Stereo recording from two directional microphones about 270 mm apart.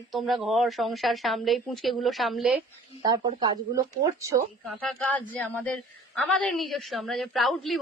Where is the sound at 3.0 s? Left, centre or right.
Centre.